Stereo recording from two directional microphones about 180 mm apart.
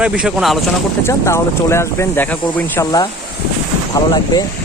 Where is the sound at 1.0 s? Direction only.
15° left (ahead or behind).